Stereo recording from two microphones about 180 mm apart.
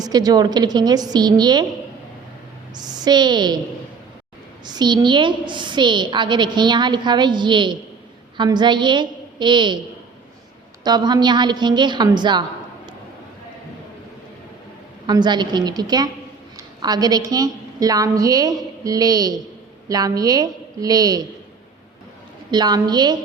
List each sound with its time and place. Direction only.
0.0 s a woman's voice: 20° right (ahead or behind)
2.7 s a woman's voice: 20° right (ahead or behind)
4.6 s a woman's voice: 25° right (ahead or behind)
10.8 s a woman's voice: 25° right (ahead or behind)
15.0 s a woman's voice: 25° right (ahead or behind)
22.5 s a woman's voice: 25° right (ahead or behind)